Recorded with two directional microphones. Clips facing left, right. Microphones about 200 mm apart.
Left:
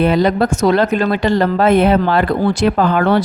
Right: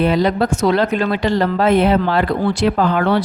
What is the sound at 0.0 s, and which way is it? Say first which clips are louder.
Speech: left 2 dB; 50° left (ahead or behind).